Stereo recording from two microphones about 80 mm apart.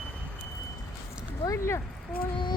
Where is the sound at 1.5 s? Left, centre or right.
Left.